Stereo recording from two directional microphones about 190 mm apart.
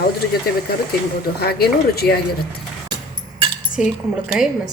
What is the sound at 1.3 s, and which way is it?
Speech, 55° left (ahead or behind).